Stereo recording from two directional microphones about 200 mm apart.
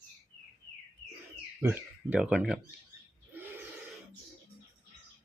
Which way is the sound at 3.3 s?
10° right (ahead or behind).